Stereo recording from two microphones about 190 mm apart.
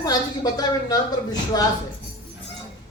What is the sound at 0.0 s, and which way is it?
A woman's voice, 20° left (ahead or behind).